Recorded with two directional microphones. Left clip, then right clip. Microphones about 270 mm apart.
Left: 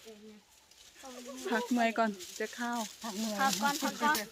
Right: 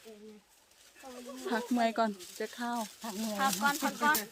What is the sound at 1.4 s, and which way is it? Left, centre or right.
Speech, centre.